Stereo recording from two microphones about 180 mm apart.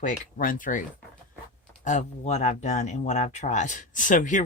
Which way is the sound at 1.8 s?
40° left (ahead or behind).